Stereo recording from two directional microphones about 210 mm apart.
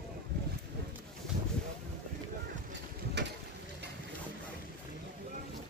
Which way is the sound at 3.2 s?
55° right (ahead or behind).